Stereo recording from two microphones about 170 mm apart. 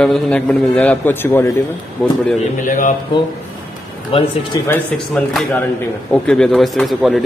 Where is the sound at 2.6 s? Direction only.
50° left (ahead or behind).